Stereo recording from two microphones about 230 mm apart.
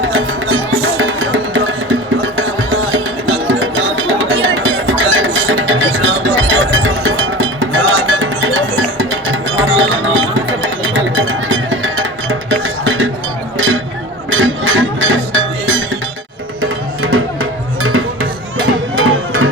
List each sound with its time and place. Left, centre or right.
0.1 s music: right
14.3 s music: right
18.9 s music: right